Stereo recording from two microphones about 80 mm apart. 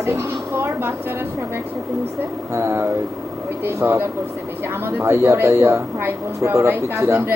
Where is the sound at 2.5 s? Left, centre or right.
Right.